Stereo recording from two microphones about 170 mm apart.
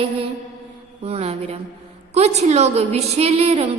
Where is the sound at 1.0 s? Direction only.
35° right (ahead or behind).